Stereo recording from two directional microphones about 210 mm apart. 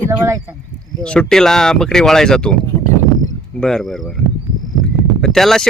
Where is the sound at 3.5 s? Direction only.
Centre (ahead or behind).